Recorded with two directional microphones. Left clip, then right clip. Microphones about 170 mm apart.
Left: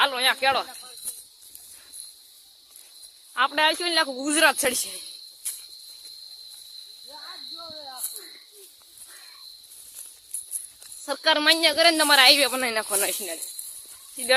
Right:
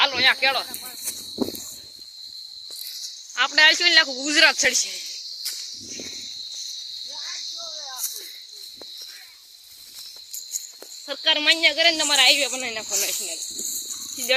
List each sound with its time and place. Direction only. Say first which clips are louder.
0.0 s snake: right 2 dB; 25° left (ahead or behind)
0.3 s speech: right 1 dB; 40° left (ahead or behind)
3.3 s speech: right 5 dB; 25° left (ahead or behind)
11.0 s speech: even; 30° left (ahead or behind)
11.9 s speech: left 4 dB; 50° left (ahead or behind)
14.3 s speech: left 1 dB; 15° left (ahead or behind)